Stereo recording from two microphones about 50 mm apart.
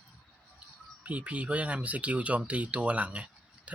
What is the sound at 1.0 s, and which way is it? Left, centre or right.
Speech, right.